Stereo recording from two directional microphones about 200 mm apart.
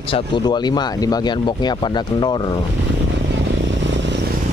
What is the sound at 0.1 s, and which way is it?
Speech, 20° left (ahead or behind).